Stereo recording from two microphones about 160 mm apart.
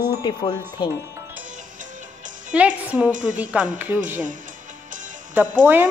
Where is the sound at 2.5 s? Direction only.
10° right (ahead or behind).